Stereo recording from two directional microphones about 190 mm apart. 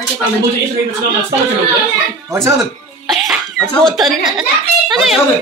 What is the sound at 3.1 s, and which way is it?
A child's voice, centre (ahead or behind).